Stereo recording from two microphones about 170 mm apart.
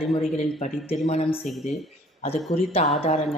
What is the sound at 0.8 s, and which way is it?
Speech, 40° left (ahead or behind).